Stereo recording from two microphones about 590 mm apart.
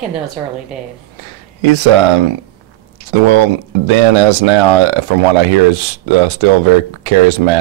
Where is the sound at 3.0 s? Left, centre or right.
Right.